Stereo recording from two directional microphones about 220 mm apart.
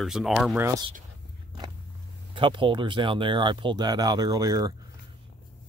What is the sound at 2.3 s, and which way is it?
Speech, 20° right (ahead or behind).